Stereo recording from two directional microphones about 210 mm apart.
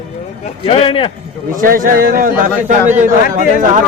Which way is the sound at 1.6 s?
40° right (ahead or behind).